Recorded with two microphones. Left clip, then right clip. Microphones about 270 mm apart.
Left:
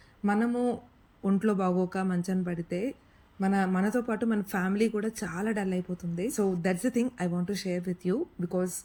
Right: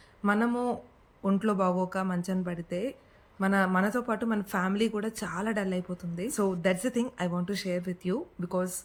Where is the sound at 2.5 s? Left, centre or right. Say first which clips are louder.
Even; right.